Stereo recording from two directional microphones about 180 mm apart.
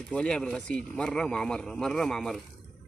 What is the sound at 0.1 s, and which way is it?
Speech, 5° left (ahead or behind).